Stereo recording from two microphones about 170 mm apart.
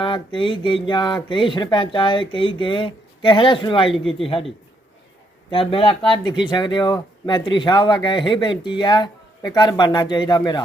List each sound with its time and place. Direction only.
0.0 s a man's voice: 30° left (ahead or behind)
5.5 s speech: 30° left (ahead or behind)